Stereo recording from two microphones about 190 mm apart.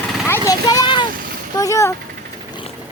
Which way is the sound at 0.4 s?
20° left (ahead or behind).